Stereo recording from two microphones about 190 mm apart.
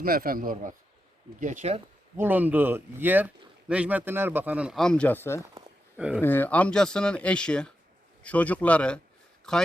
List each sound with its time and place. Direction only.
0.0 s a man's voice: 50° right (ahead or behind)
2.1 s speech: 10° right (ahead or behind)